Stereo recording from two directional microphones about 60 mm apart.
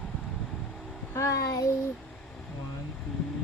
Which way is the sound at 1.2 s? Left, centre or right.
Left.